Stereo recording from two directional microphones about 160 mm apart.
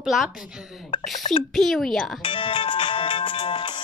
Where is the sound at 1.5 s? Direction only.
Centre (ahead or behind).